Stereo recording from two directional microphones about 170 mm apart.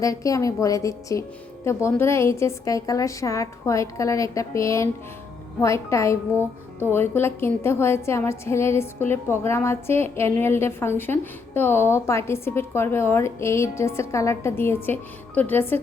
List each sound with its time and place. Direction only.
0.0 s a woman's voice: 20° left (ahead or behind)